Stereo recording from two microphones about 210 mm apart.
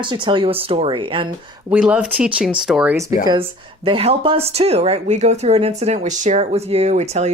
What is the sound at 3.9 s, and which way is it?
A woman's voice, 25° right (ahead or behind).